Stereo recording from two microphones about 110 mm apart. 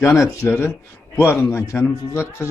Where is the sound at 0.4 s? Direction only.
25° left (ahead or behind).